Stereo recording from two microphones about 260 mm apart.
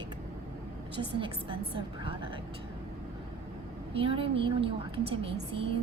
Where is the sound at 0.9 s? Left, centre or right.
Centre.